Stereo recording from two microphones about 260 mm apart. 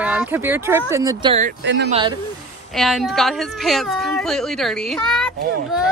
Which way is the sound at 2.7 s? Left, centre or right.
Centre.